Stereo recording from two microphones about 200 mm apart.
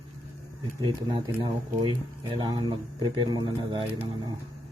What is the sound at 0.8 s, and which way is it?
Speech, 25° right (ahead or behind).